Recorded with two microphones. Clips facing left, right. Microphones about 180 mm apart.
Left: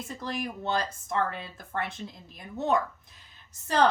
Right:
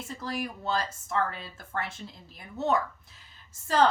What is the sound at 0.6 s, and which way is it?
Speech, 20° left (ahead or behind).